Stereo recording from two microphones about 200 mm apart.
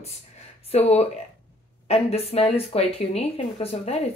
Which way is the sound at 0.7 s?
30° left (ahead or behind).